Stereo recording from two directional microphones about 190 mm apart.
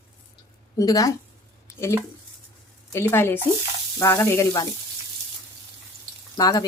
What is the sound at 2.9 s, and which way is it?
A woman's voice, 10° left (ahead or behind).